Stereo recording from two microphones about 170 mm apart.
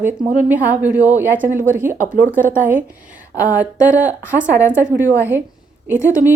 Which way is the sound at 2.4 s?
50° right (ahead or behind).